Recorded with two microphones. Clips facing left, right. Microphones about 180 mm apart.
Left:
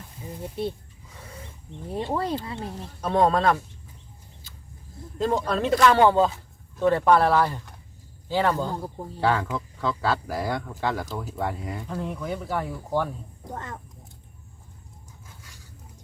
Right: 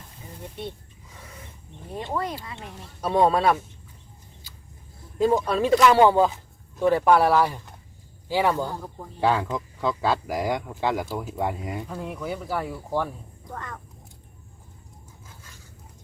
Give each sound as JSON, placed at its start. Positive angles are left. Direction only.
{"t": 1.9, "sound": "speech", "side_deg": 30}
{"t": 3.0, "sound": "speech", "side_deg": -10}
{"t": 5.1, "sound": "speech", "side_deg": -10}
{"t": 13.5, "sound": "speech", "side_deg": 25}